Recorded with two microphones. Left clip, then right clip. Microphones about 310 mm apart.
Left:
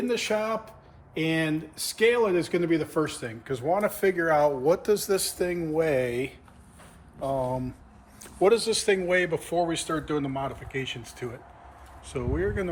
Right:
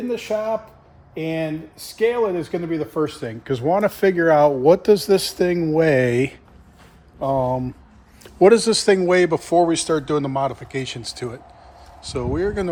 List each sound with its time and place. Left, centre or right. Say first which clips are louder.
1.1 s speech: right 2 dB; centre
8.2 s a sound: right 9 dB; right
8.6 s a man's voice: right 8 dB; right
9.2 s speech: right 10 dB; centre